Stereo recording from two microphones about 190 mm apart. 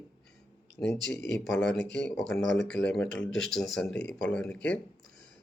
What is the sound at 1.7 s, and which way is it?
Speech, 65° left (ahead or behind).